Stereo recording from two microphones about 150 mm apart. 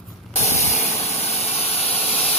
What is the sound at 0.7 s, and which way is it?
Vehicle, 45° left (ahead or behind).